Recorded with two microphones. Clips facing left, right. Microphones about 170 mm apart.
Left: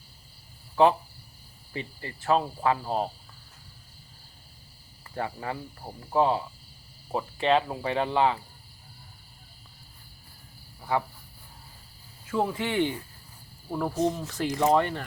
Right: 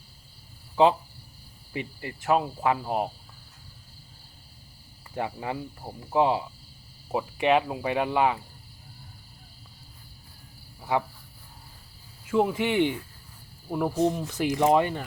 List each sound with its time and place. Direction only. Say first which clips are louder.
1.7 s speech: right 2 dB; 15° right (ahead or behind)
5.1 s speech: right 2 dB; 15° right (ahead or behind)
10.8 s a sound: right 1 dB; 15° right (ahead or behind)
12.3 s speech: right 4 dB; 15° right (ahead or behind)